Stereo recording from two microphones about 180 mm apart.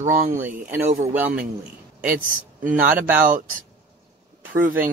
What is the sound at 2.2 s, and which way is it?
Speech, 50° right (ahead or behind).